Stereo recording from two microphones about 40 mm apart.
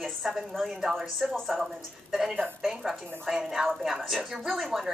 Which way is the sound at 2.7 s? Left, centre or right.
Centre.